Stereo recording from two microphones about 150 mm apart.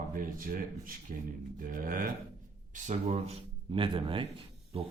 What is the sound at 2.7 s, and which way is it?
Speech, 55° right (ahead or behind).